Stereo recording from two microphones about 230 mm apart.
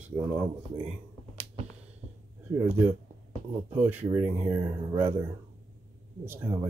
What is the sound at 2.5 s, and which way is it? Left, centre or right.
Speech, centre.